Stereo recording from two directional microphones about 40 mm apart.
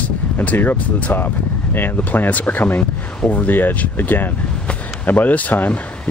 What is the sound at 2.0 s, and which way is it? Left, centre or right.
Speech, left.